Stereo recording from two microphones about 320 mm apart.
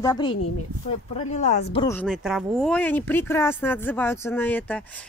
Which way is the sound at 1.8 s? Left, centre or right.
Centre.